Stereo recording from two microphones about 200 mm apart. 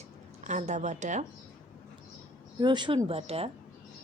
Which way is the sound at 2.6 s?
20° right (ahead or behind).